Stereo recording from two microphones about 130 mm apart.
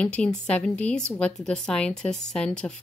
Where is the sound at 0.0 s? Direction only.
10° left (ahead or behind).